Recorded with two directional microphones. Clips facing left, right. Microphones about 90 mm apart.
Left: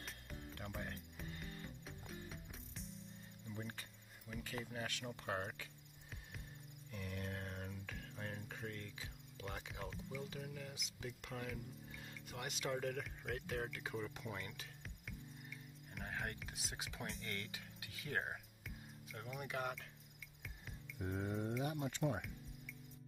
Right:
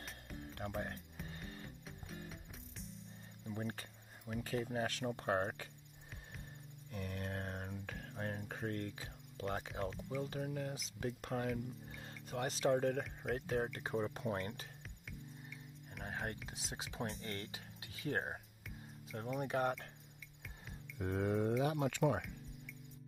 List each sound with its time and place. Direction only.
0.6 s speech: 45° right (ahead or behind)
1.2 s music: 45° right (ahead or behind)
1.9 s music: centre (ahead or behind)
3.5 s speech: 45° right (ahead or behind)
6.9 s a sound: 45° right (ahead or behind)
10.2 s speech: 45° right (ahead or behind)
16.0 s music: 25° right (ahead or behind)
16.4 s speech: 25° right (ahead or behind)
19.4 s speech: 40° right (ahead or behind)
21.0 s speech: 75° right (ahead or behind)